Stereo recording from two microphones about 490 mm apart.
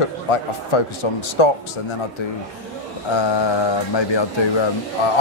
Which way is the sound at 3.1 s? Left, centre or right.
Left.